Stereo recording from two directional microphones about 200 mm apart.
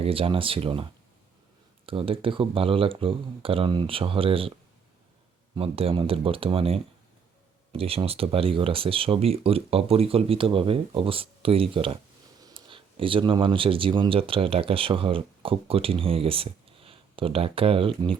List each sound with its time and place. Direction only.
0.0 s speech: 30° right (ahead or behind)
1.9 s speech: 25° right (ahead or behind)
5.5 s speech: 30° right (ahead or behind)